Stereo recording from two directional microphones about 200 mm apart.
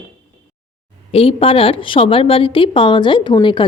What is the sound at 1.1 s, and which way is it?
Speech, 30° left (ahead or behind).